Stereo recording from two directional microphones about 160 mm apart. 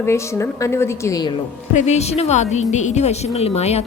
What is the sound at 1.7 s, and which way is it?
A woman's voice, 45° left (ahead or behind).